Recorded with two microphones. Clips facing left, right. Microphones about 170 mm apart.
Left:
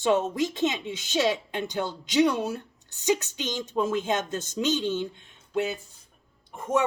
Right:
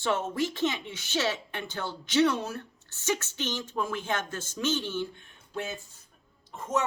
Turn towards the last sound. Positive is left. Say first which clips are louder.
# left 4 dB
turn(degrees=15)  # may be behind; listen again after turning